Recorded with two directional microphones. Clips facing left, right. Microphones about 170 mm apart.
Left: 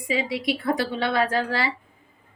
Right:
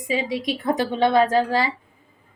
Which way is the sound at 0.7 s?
20° right (ahead or behind).